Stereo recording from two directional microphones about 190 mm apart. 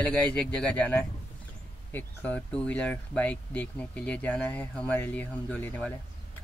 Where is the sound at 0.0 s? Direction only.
5° left (ahead or behind).